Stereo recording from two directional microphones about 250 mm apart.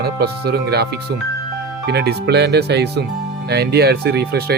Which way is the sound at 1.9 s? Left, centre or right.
Right.